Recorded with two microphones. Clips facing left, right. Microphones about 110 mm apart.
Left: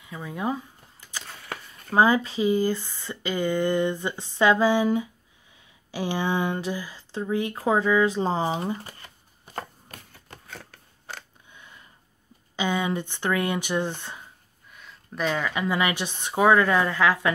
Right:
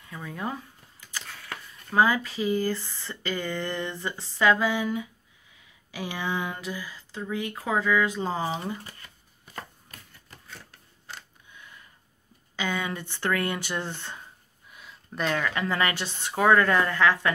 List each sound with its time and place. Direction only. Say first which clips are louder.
0.0 s speech: left 4 dB; 15° left (ahead or behind)
1.9 s speech: left 3 dB; 25° left (ahead or behind)
10.6 s a sound: left 4 dB; 75° left (ahead or behind)
11.5 s a sound: even; 25° left (ahead or behind)
12.5 s speech: left 5 dB; 20° left (ahead or behind)
14.7 s speech: left 1 dB; centre (ahead or behind)